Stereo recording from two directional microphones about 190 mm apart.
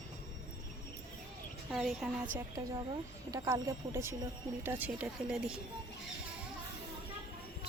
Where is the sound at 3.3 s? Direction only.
20° right (ahead or behind).